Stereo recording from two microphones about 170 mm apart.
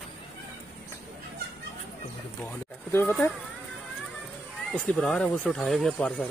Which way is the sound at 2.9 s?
15° left (ahead or behind).